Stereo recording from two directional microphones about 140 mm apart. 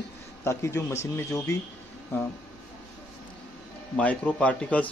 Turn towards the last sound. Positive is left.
turn(degrees=10)  # may be behind; listen again after turning